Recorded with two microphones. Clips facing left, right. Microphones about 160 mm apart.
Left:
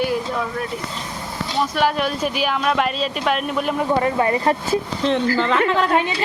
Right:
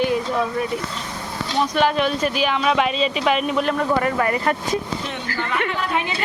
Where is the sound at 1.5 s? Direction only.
5° left (ahead or behind).